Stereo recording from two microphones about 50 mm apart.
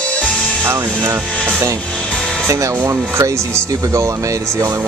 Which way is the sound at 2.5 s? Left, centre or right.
Right.